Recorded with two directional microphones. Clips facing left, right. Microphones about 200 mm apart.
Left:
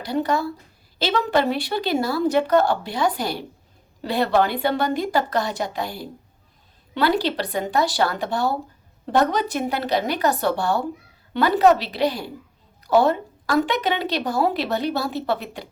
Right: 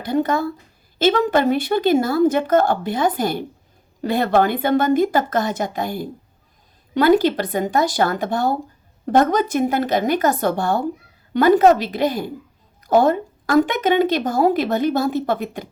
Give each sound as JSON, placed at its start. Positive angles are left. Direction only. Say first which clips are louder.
{"t": 0.0, "sound": "a woman's voice", "louder": "right 3 dB", "side_deg": -50}